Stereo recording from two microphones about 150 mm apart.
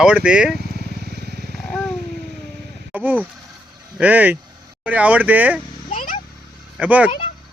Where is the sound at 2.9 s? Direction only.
10° right (ahead or behind).